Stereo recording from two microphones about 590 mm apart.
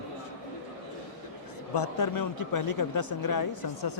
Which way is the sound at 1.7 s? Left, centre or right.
Left.